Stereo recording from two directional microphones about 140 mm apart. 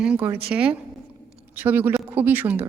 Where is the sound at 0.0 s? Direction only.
10° right (ahead or behind).